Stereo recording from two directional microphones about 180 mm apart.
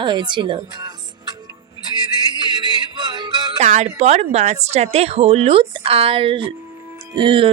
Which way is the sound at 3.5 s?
40° right (ahead or behind).